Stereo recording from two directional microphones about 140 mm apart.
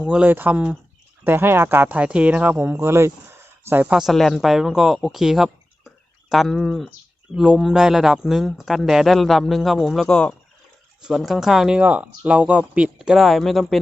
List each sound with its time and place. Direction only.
0.0 s a man's voice: 10° right (ahead or behind)